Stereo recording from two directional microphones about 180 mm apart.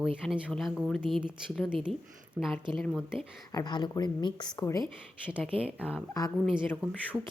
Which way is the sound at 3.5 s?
20° left (ahead or behind).